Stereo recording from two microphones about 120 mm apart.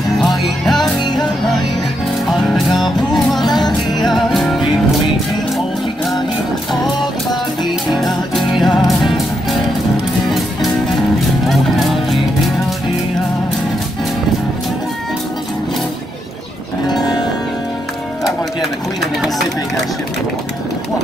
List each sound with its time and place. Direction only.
0.2 s music: centre (ahead or behind)
2.8 s music: centre (ahead or behind)
3.4 s music: 35° left (ahead or behind)
3.9 s music: centre (ahead or behind)
7.9 s music: centre (ahead or behind)